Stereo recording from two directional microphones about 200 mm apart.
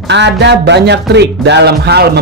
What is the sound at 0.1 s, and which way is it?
A man's voice, 60° right (ahead or behind).